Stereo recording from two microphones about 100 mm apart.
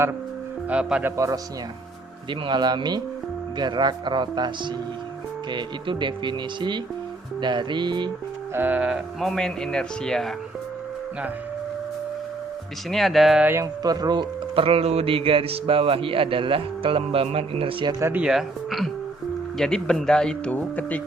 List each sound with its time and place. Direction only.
0.7 s music: 10° right (ahead or behind)
1.0 s speech: 30° right (ahead or behind)
2.5 s speech: 50° right (ahead or behind)
8.5 s music: 15° right (ahead or behind)
9.2 s speech: 5° left (ahead or behind)
12.9 s speech: centre (ahead or behind)
13.4 s speech: 25° right (ahead or behind)
13.8 s speech: 40° right (ahead or behind)
14.5 s a man's voice: 70° right (ahead or behind)
18.1 s speech: 5° right (ahead or behind); by 21.0 s 15° left (ahead or behind)